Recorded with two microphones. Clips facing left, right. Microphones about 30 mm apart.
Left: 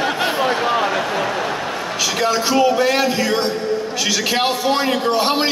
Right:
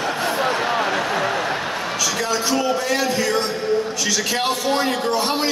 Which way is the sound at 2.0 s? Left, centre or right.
Left.